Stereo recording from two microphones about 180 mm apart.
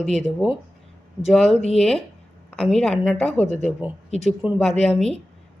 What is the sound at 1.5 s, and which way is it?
Speech, 35° left (ahead or behind).